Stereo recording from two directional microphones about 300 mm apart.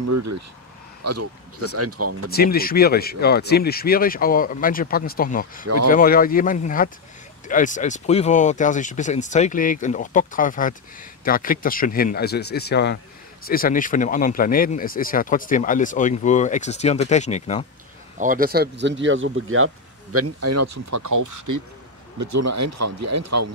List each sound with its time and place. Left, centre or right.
0.0 s speech: right
2.3 s speech: left
18.2 s speech: right
22.2 s speech: right